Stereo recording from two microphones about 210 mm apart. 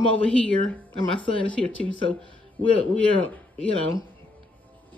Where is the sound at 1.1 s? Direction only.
25° left (ahead or behind).